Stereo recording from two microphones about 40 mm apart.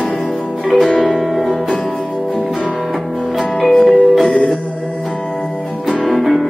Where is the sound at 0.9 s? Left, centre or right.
Left.